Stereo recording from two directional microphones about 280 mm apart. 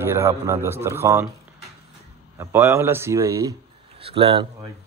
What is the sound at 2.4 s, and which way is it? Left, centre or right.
Speech, centre.